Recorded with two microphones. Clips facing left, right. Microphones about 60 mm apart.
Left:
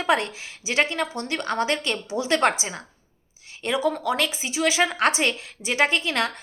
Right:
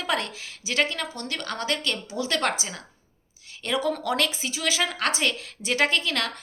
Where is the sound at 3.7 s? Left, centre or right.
Centre.